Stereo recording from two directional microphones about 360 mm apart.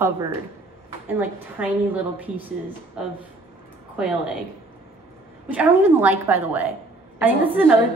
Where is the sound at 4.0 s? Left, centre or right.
Centre.